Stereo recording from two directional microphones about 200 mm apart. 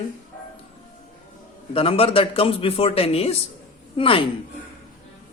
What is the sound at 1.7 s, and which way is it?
Speech, 30° left (ahead or behind).